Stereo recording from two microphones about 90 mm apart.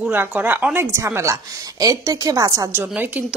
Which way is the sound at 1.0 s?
30° right (ahead or behind).